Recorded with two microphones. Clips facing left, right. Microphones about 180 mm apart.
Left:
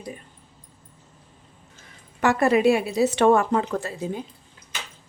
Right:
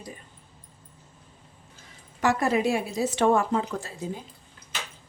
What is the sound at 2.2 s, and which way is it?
A woman's voice, 65° left (ahead or behind).